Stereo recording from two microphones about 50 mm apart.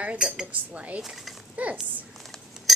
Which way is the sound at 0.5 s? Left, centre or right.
Right.